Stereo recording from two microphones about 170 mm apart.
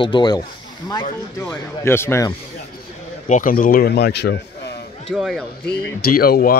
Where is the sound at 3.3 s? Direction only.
55° left (ahead or behind); by 4.8 s 75° left (ahead or behind).